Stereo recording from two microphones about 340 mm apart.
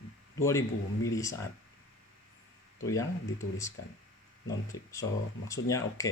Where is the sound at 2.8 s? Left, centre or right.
Centre.